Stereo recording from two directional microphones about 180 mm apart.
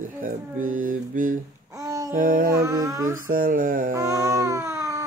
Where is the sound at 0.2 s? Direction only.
50° right (ahead or behind).